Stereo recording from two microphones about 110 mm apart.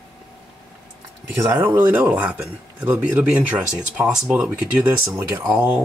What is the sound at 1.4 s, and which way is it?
Speech, 25° right (ahead or behind).